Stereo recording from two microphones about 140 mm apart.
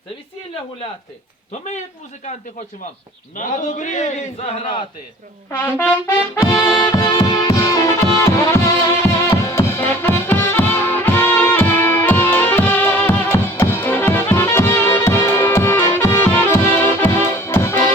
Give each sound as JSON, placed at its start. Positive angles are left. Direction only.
{"t": 3.3, "sound": "a man's voice", "side_deg": 65}
{"t": 5.5, "sound": "brass instrument", "side_deg": 15}
{"t": 6.7, "sound": "music", "side_deg": 25}